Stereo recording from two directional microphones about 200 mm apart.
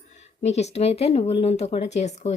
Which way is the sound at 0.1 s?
35° left (ahead or behind).